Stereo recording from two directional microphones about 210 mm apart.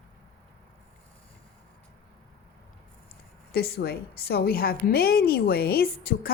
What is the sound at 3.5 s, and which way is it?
A woman's voice, 45° left (ahead or behind).